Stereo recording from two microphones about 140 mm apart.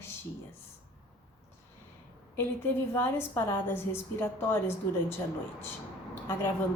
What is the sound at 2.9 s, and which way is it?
A woman's voice, 15° left (ahead or behind).